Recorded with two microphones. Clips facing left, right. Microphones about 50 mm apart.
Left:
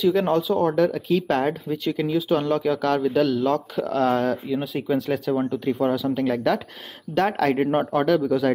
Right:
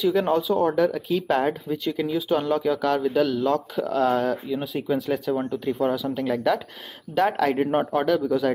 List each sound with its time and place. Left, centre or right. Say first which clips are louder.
0.0 s speech: left 1 dB; centre